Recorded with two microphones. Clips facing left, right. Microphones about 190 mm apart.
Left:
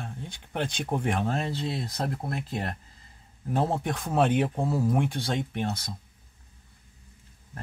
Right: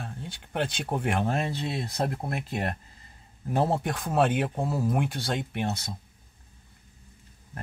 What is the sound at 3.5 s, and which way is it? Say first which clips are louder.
Speech: right 1 dB; 5° right (ahead or behind).